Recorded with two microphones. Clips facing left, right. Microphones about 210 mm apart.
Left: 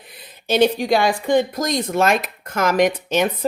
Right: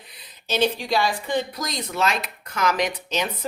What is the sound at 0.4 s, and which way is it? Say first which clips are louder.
Speech: left 6 dB; 55° left (ahead or behind).